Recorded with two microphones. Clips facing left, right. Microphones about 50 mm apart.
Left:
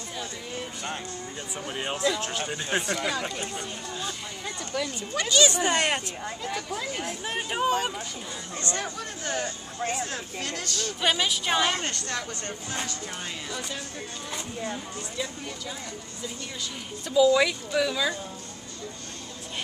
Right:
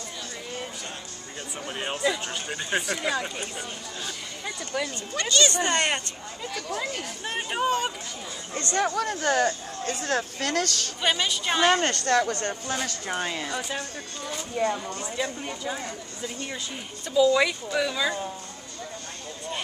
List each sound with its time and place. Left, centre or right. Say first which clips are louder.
1.7 s speech: even; centre
4.7 s speech: right 1 dB; centre
5.1 s speech: left 1 dB; centre
7.3 s speech: even; centre
8.7 s speech: right 8 dB; right
11.0 s speech: even; centre
11.6 s speech: right 6 dB; right
12.8 s speech: right 5 dB; right
15.4 s speech: right 5 dB; right
17.1 s speech: even; centre